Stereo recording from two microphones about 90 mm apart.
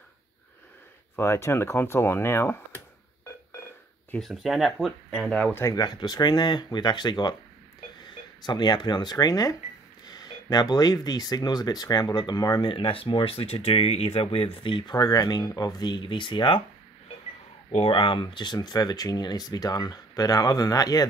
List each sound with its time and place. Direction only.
1.1 s speech: 30° left (ahead or behind)
4.2 s speech: centre (ahead or behind)
5.3 s speech: 15° left (ahead or behind)
5.8 s speech: 50° left (ahead or behind)
8.5 s speech: 55° left (ahead or behind)
12.7 s speech: 80° left
17.8 s speech: 70° left (ahead or behind); by 21.1 s 45° left (ahead or behind)